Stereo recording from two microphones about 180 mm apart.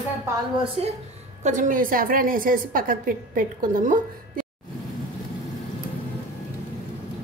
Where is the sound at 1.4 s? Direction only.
45° right (ahead or behind).